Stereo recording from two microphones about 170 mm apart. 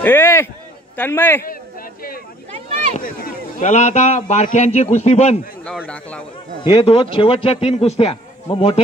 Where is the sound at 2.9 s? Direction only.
50° left (ahead or behind).